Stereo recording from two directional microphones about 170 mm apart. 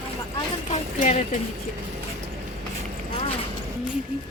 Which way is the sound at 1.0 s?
45° left (ahead or behind).